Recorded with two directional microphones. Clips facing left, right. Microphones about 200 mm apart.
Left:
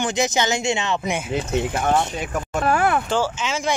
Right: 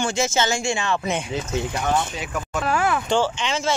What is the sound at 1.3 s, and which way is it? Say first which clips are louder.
Speech: left 3 dB; 50° left (ahead or behind).